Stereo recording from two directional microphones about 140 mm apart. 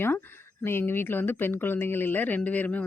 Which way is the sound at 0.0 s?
15° left (ahead or behind).